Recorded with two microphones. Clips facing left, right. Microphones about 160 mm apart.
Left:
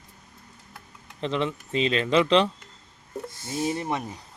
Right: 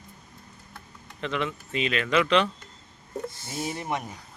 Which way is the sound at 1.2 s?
30° left (ahead or behind).